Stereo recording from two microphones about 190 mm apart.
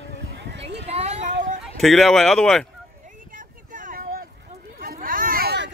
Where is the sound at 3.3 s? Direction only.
45° right (ahead or behind).